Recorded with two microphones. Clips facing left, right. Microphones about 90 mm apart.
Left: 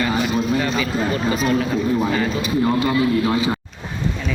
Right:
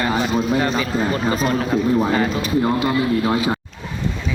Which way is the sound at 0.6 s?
35° right (ahead or behind).